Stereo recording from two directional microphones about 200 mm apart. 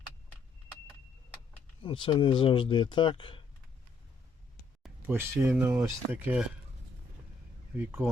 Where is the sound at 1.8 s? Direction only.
25° left (ahead or behind).